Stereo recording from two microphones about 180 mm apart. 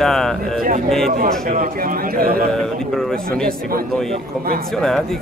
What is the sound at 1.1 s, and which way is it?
A man's voice, 50° right (ahead or behind).